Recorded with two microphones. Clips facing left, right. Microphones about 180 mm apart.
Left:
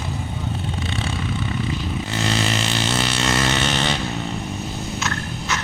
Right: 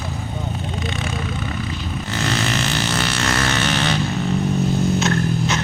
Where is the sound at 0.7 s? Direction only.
30° left (ahead or behind).